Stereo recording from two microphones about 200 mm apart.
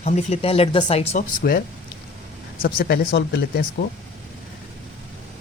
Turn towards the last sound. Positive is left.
turn(degrees=50)  # may be behind; listen again after turning